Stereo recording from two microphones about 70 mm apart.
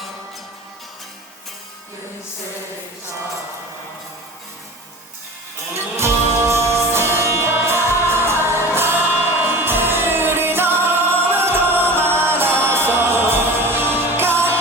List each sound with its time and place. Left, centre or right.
5.7 s music: right